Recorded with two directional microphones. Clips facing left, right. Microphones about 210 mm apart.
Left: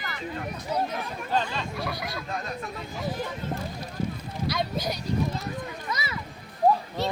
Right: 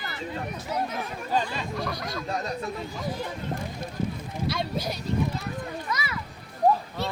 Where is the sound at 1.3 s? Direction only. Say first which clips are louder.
Even; 10° right (ahead or behind).